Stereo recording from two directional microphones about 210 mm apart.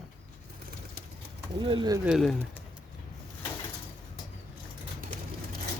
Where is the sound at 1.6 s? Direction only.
20° right (ahead or behind).